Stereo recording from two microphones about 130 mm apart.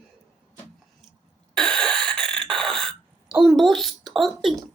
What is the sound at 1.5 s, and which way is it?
Cough, 5° left (ahead or behind).